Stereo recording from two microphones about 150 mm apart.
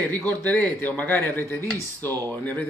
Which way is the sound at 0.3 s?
10° left (ahead or behind).